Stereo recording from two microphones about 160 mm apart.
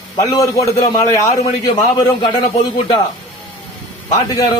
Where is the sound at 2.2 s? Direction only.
30° left (ahead or behind).